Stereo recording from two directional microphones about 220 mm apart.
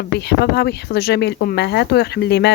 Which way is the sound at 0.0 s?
50° left (ahead or behind).